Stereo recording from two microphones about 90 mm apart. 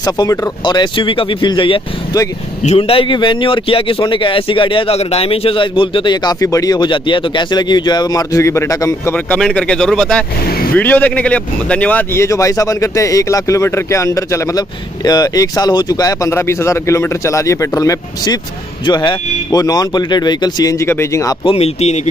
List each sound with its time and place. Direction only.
0.0 s speech: 40° left (ahead or behind)
0.7 s a man's voice: 60° left (ahead or behind)
2.8 s a man's voice: 85° left
4.0 s a man's voice: 70° left (ahead or behind)
6.4 s speech: 40° left (ahead or behind)
9.1 s speech: 15° left (ahead or behind)
10.7 s speech: 20° left (ahead or behind); by 14.6 s 35° left (ahead or behind)
15.0 s speech: 45° left (ahead or behind)
16.3 s speech: 30° left (ahead or behind); by 20.8 s 45° left (ahead or behind)
20.8 s speech: 30° left (ahead or behind)